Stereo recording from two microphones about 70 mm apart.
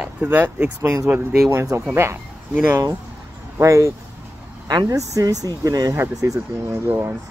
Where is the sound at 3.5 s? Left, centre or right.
Right.